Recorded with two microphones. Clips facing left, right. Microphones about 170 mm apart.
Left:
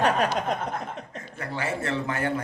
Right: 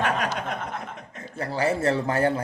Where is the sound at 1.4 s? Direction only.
35° right (ahead or behind).